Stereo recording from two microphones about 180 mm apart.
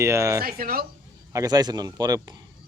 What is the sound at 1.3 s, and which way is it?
Speech, 20° right (ahead or behind).